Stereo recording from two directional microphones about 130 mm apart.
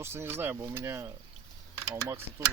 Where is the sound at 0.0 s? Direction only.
20° right (ahead or behind).